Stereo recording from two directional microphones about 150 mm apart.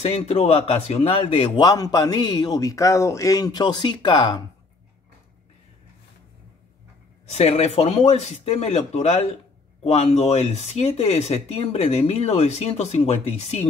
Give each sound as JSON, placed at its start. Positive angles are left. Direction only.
{"t": 0.0, "sound": "speech", "side_deg": 45}
{"t": 7.2, "sound": "speech", "side_deg": 45}